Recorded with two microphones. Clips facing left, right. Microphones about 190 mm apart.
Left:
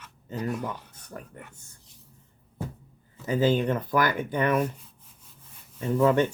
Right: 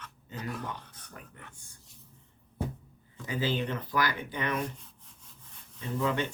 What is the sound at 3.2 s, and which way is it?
Speech, 45° left (ahead or behind).